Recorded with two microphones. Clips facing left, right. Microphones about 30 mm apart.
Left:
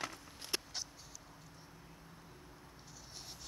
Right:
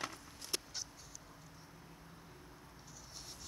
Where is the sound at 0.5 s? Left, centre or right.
Centre.